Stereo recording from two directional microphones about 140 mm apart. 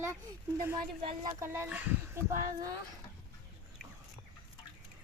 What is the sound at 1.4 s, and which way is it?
Speech, 15° right (ahead or behind).